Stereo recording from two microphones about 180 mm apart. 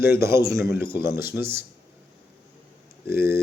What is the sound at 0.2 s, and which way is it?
A man's voice, 15° right (ahead or behind).